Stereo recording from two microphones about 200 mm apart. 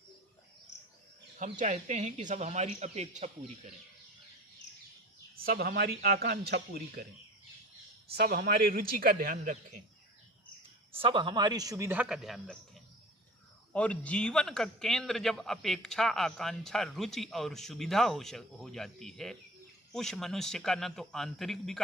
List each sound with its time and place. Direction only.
1.4 s speech: 40° right (ahead or behind)
5.4 s speech: 50° right (ahead or behind)
8.1 s speech: 50° right (ahead or behind)
11.0 s a man's voice: 25° right (ahead or behind); by 21.8 s centre (ahead or behind)